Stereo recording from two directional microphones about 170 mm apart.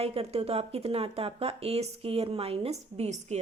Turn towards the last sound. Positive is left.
turn(degrees=-40)  # may be behind; listen again after turning